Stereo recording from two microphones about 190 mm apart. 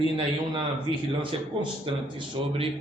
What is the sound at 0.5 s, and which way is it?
Speech, 25° right (ahead or behind).